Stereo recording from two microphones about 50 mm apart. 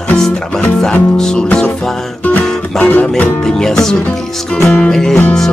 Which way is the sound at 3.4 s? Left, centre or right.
Centre.